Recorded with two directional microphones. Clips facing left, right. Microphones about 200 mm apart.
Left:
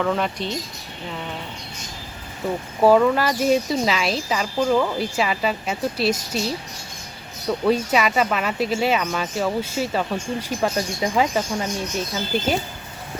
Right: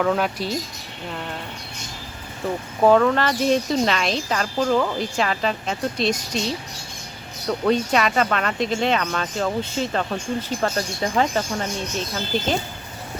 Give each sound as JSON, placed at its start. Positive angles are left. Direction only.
{"t": 0.0, "sound": "speech", "side_deg": -5}
{"t": 2.8, "sound": "speech", "side_deg": 5}